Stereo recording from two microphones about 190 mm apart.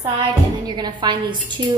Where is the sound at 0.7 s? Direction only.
25° right (ahead or behind).